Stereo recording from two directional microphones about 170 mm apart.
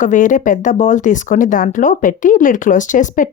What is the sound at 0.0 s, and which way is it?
Speech, 50° left (ahead or behind).